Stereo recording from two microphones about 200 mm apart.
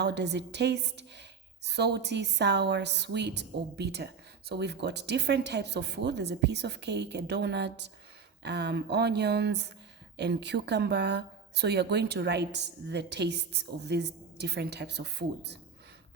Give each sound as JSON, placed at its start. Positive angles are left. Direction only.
{"t": 0.0, "sound": "a woman's voice", "side_deg": -60}